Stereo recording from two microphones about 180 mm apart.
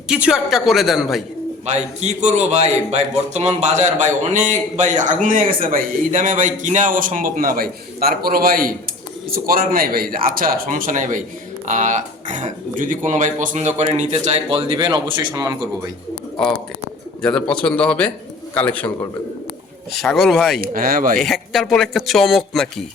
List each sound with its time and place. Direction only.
0.1 s speech: 5° right (ahead or behind)
1.6 s a man's voice: 40° right (ahead or behind); by 15.5 s 25° right (ahead or behind)
17.2 s speech: 5° left (ahead or behind)
19.9 s speech: centre (ahead or behind)
20.6 s a man's voice: 50° right (ahead or behind)
21.2 s speech: centre (ahead or behind)